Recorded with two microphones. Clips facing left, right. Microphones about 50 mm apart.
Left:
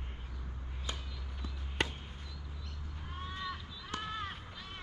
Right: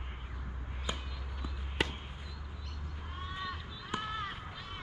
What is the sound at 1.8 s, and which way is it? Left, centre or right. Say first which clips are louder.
Basketball bounce: right 1 dB; centre.